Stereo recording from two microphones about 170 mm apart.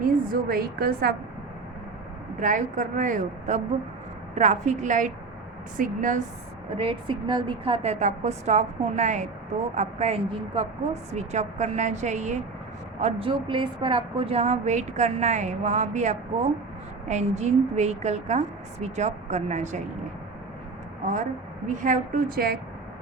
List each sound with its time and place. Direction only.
0.0 s a woman's voice: 60° right (ahead or behind)
2.4 s a woman's voice: 50° right (ahead or behind)
6.7 s a woman's voice: 30° right (ahead or behind)
21.7 s a woman's voice: 50° right (ahead or behind)